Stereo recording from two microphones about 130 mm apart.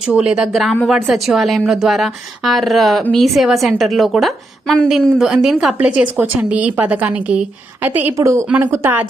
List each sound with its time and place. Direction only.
0.1 s a woman's voice: 5° right (ahead or behind)